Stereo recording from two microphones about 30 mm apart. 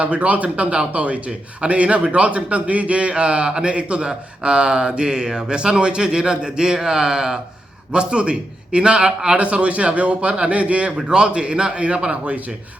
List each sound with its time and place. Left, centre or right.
0.0 s a man's voice: right
7.9 s a man's voice: right
9.5 s a man's voice: right
10.9 s a man's voice: right